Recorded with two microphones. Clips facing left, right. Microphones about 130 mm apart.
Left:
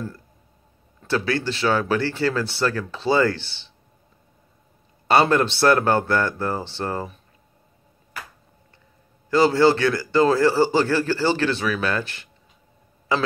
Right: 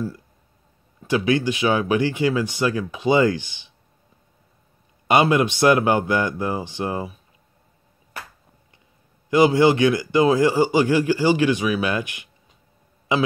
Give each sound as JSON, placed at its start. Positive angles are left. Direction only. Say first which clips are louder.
{"t": 1.0, "sound": "a man's voice", "louder": "right 3 dB", "side_deg": -15}
{"t": 5.0, "sound": "a man's voice", "louder": "even", "side_deg": -15}
{"t": 9.3, "sound": "a man's voice", "louder": "right 1 dB", "side_deg": -15}